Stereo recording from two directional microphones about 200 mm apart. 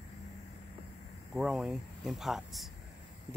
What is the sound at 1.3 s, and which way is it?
Speech, 5° right (ahead or behind).